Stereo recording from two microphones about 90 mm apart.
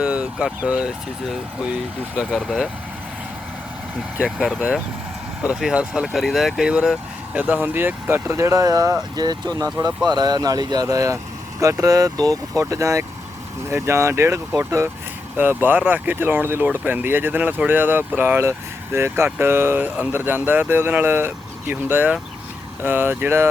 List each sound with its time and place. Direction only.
0.0 s speech: 15° right (ahead or behind)
4.2 s speech: 5° right (ahead or behind)
7.3 s speech: 20° right (ahead or behind)
15.4 s speech: 20° right (ahead or behind)